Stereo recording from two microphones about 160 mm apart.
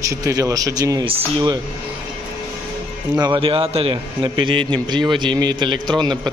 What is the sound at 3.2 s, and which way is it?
A man's voice, 30° right (ahead or behind).